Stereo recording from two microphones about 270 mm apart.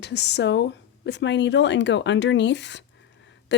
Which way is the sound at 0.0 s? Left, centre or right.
Left.